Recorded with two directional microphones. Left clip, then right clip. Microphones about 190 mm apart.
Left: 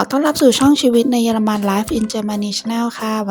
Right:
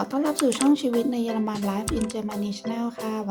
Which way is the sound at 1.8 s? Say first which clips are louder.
Left 8 dB; centre (ahead or behind).